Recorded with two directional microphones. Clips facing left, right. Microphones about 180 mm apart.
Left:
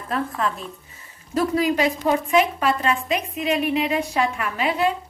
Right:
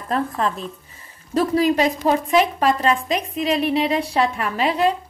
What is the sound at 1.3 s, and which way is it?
A woman's voice, 35° right (ahead or behind).